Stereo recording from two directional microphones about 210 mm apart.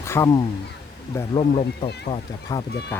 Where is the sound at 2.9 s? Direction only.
10° left (ahead or behind).